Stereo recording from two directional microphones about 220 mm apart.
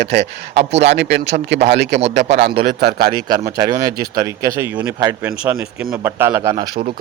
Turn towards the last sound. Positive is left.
turn(degrees=-15)  # may be behind; listen again after turning